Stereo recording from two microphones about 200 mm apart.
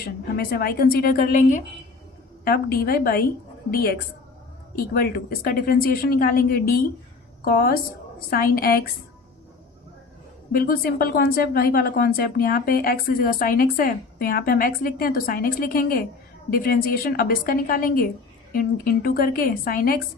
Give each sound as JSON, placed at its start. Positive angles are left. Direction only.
{"t": 0.3, "sound": "a woman's voice", "side_deg": 50}
{"t": 10.5, "sound": "a woman's voice", "side_deg": 45}
{"t": 19.0, "sound": "a woman's voice", "side_deg": 45}